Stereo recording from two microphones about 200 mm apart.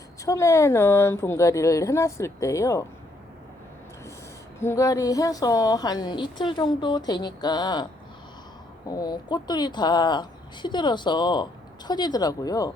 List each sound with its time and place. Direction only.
0.3 s a woman's voice: 15° left (ahead or behind)
4.6 s a woman's voice: 15° left (ahead or behind)
8.9 s a woman's voice: 20° left (ahead or behind)